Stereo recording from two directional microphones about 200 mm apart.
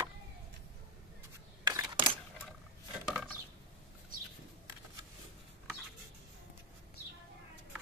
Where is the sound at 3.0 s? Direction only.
5° right (ahead or behind).